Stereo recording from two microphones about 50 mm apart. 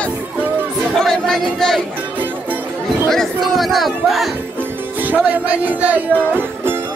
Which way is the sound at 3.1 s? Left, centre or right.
Centre.